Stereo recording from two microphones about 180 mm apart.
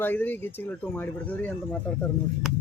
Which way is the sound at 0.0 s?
10° left (ahead or behind).